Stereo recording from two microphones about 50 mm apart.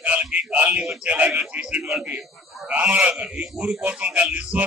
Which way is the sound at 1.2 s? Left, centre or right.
Centre.